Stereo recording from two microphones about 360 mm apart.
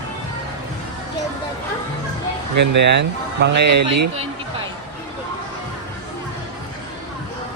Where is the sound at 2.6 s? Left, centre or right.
Right.